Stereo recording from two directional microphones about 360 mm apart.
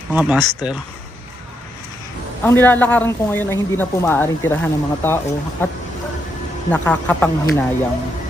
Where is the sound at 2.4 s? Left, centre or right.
Centre.